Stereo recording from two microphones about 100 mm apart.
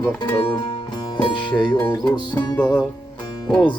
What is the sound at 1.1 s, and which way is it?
Music, 55° left (ahead or behind).